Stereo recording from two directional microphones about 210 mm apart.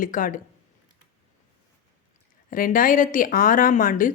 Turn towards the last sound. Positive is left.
turn(degrees=40)  # may be behind; listen again after turning